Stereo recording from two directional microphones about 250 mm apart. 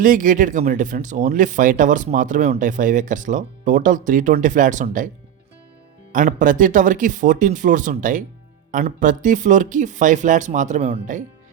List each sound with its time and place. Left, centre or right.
0.0 s speech: right
6.1 s speech: right